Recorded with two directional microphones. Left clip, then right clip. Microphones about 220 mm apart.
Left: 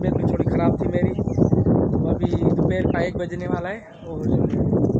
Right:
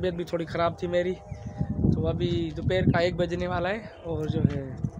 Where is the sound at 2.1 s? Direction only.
15° right (ahead or behind).